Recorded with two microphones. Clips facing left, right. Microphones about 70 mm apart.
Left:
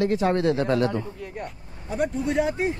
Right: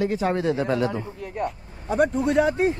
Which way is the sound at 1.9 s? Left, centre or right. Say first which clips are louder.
Right 4 dB; right.